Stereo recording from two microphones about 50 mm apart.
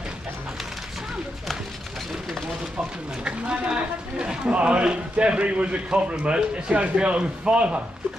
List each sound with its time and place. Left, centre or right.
3.3 s speech: centre